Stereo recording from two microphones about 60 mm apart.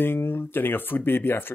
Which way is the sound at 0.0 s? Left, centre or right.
Left.